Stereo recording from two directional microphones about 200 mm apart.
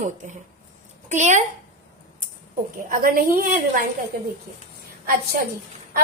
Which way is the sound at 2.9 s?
45° right (ahead or behind).